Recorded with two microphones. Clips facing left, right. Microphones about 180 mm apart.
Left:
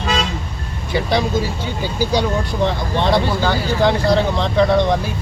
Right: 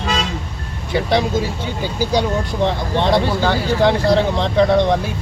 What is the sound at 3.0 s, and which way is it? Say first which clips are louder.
Speech: right 1 dB; 25° right (ahead or behind).